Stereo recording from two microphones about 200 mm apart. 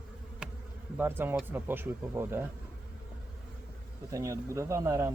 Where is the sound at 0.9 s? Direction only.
10° right (ahead or behind).